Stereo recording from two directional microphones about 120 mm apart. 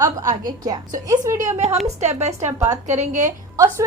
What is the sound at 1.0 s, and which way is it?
Speech, 30° right (ahead or behind).